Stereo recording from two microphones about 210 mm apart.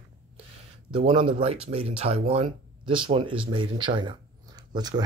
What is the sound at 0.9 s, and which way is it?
Speech, 25° right (ahead or behind).